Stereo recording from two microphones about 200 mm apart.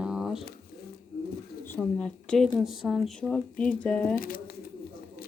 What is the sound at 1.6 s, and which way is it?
Speech, 10° left (ahead or behind).